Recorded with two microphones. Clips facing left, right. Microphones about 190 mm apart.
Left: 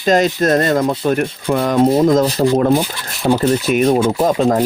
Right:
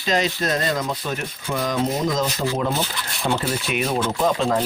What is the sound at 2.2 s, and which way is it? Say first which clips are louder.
Speech: left 9 dB; 35° left (ahead or behind).